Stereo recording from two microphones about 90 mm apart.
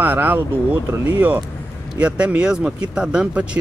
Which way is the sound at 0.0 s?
20° right (ahead or behind).